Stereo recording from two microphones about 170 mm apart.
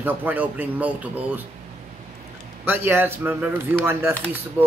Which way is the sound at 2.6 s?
10° right (ahead or behind).